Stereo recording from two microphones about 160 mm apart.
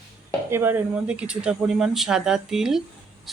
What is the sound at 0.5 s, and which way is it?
Speech, 15° right (ahead or behind).